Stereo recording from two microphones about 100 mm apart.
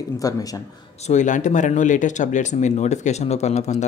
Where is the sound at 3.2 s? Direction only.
90° left.